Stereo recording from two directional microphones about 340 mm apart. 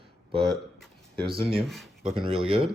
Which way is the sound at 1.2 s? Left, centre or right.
Centre.